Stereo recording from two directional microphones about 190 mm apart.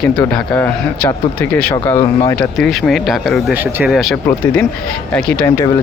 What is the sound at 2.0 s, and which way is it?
Speech, 25° left (ahead or behind).